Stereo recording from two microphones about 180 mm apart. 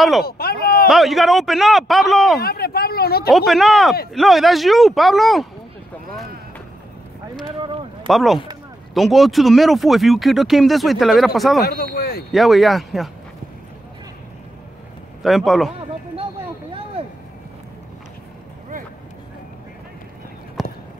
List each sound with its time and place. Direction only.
0.2 s speech: 60° left (ahead or behind)
0.8 s speech: centre (ahead or behind)
2.4 s speech: 60° left (ahead or behind)
3.3 s speech: centre (ahead or behind)
7.4 s speech: 30° right (ahead or behind)
8.1 s speech: centre (ahead or behind)
11.6 s speech: 55° left (ahead or behind)
12.3 s speech: centre (ahead or behind)
15.2 s speech: centre (ahead or behind)
20.6 s clip-clop: centre (ahead or behind)